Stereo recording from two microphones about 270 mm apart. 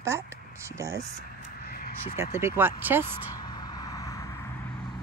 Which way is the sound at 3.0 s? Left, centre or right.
Centre.